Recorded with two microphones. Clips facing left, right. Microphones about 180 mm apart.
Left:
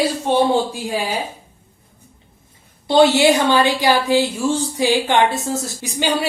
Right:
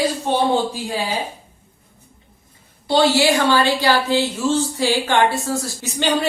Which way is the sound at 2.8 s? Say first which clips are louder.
Left 3 dB; 20° left (ahead or behind).